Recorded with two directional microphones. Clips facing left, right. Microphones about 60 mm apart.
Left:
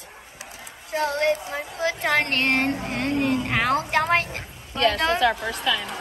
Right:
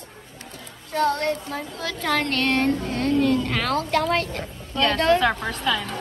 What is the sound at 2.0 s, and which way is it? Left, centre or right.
Speech, left.